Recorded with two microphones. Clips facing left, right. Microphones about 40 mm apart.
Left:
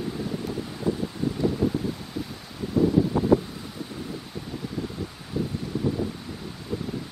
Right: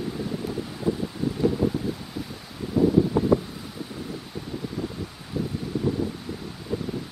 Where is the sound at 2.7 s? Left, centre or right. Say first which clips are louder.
Right 1 dB; centre.